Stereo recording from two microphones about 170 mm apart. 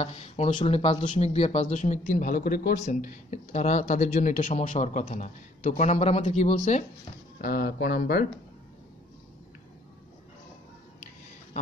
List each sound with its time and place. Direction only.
0.0 s speech: 35° left (ahead or behind); by 2.8 s 55° left (ahead or behind)
2.8 s speech: 45° left (ahead or behind)
7.4 s speech: 60° left (ahead or behind)